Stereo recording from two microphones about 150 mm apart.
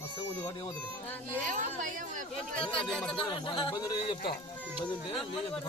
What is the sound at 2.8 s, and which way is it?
Speech, 5° left (ahead or behind).